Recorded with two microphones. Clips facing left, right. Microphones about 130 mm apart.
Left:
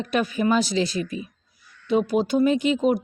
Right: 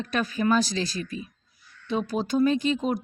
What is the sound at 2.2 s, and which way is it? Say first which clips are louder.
Speech: right 1 dB; 15° left (ahead or behind).